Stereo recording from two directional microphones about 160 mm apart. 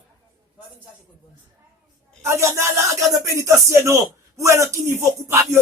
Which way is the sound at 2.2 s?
15° right (ahead or behind).